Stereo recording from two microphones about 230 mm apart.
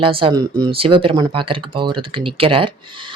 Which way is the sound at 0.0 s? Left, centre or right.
Right.